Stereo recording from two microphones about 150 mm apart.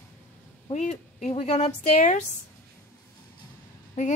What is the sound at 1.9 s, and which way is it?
Speech, 60° left (ahead or behind).